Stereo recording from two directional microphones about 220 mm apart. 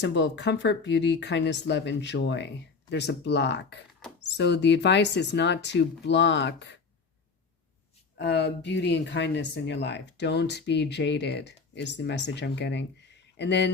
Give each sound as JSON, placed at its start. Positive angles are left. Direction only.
{"t": 0.0, "sound": "speech", "side_deg": 55}
{"t": 4.0, "sound": "mouse", "side_deg": 0}
{"t": 4.4, "sound": "speech", "side_deg": 50}
{"t": 8.2, "sound": "speech", "side_deg": 50}